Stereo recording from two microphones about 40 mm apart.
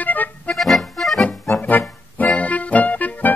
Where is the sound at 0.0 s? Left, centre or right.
Left.